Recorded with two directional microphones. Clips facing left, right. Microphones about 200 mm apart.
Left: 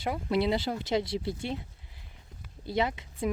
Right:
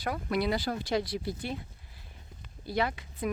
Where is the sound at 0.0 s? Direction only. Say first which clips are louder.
Left 2 dB; 25° left (ahead or behind).